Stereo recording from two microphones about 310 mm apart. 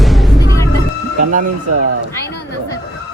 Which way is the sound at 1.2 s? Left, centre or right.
Right.